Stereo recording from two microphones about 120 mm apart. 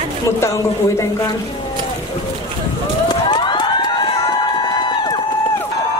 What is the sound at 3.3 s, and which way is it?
Emergency vehicle, 40° left (ahead or behind).